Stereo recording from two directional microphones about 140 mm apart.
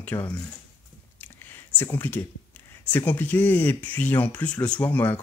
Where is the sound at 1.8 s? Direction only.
15° left (ahead or behind).